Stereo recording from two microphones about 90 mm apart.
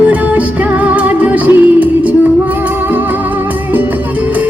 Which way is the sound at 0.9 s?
15° right (ahead or behind).